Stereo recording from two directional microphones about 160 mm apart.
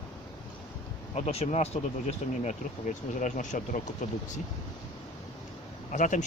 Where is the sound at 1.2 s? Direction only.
40° left (ahead or behind).